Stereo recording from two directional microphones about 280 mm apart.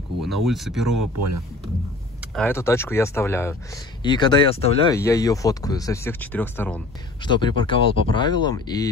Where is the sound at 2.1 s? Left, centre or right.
Centre.